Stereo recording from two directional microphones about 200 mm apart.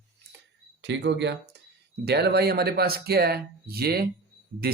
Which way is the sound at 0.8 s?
60° right (ahead or behind).